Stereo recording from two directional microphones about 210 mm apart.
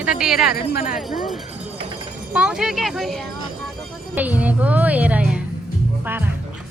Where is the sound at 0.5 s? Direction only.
45° left (ahead or behind).